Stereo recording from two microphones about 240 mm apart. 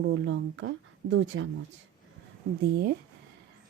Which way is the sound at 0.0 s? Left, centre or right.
Right.